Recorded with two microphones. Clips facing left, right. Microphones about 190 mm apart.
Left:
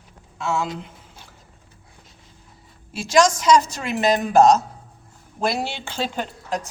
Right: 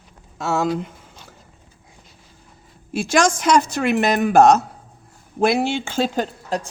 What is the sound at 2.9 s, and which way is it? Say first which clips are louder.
A woman's voice: even; 55° right (ahead or behind).